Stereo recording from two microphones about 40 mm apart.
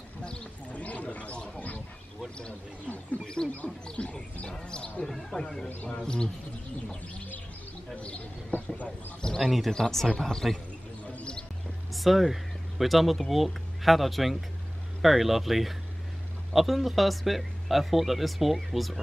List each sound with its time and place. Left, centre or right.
0.2 s speech: left
3.4 s speech: centre
3.8 s speech: left
5.0 s speech: centre
7.9 s speech: left
8.5 s speech: left
9.4 s speech: centre
9.7 s speech: centre
11.9 s speech: centre